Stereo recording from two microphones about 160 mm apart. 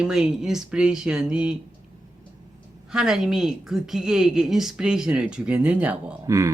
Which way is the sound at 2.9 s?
5° right (ahead or behind).